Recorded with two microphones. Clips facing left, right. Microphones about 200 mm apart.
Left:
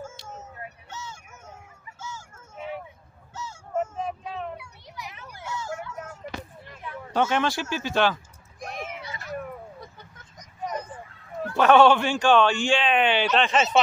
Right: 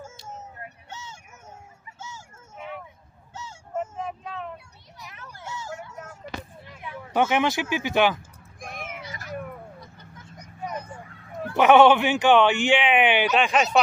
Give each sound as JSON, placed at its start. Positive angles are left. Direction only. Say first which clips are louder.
{"t": 4.6, "sound": "children playing", "louder": "left 5 dB", "side_deg": 80}
{"t": 6.8, "sound": "speech", "louder": "right 1 dB", "side_deg": -15}
{"t": 8.5, "sound": "cat", "louder": "left 2 dB", "side_deg": -50}
{"t": 10.3, "sound": "vehicle", "louder": "left 1 dB", "side_deg": -10}
{"t": 11.5, "sound": "speech", "louder": "right 1 dB", "side_deg": -20}
{"t": 13.3, "sound": "speech", "louder": "right 1 dB", "side_deg": -5}